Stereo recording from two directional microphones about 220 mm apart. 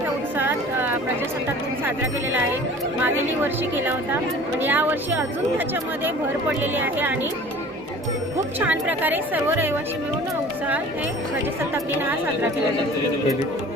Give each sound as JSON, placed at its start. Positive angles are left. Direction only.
{"t": 0.3, "sound": "a sound", "side_deg": -10}
{"t": 3.0, "sound": "a woman's voice", "side_deg": -10}
{"t": 8.5, "sound": "a woman's voice", "side_deg": -5}